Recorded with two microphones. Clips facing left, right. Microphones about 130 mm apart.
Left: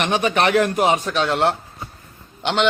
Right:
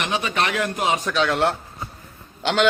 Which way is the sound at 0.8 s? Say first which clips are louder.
Left 5 dB; 55° left (ahead or behind).